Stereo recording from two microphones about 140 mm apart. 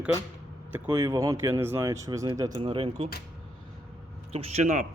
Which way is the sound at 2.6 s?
40° right (ahead or behind).